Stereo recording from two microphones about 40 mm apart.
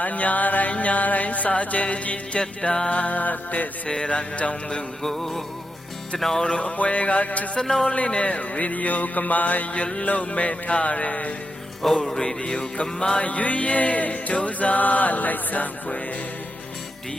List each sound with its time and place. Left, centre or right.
0.0 s music: left
2.4 s music: left
3.8 s music: left
5.0 s music: centre
6.6 s music: left
7.5 s music: centre
7.9 s music: left
11.8 s music: centre
12.2 s music: left
13.2 s music: left